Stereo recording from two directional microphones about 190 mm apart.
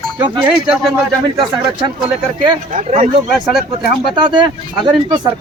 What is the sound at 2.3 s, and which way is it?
Speech, 40° right (ahead or behind).